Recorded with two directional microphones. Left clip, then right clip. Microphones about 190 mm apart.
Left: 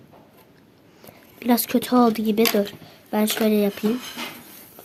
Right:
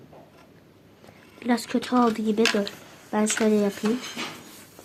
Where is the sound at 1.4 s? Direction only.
55° left (ahead or behind).